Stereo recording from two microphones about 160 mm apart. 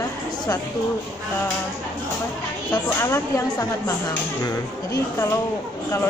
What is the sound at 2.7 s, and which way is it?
A woman's voice, 15° left (ahead or behind).